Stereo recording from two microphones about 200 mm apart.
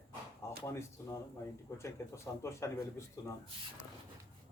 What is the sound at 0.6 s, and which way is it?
A man's voice, 15° left (ahead or behind).